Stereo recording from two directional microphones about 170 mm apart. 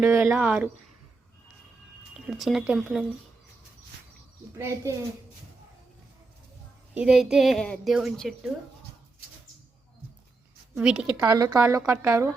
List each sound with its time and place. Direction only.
0.0 s a woman's voice: 15° right (ahead or behind)
2.1 s speech: centre (ahead or behind)
4.5 s a woman's voice: 15° right (ahead or behind)
6.9 s speech: 5° right (ahead or behind)
10.8 s speech: 5° right (ahead or behind)
11.2 s a woman's voice: 20° right (ahead or behind)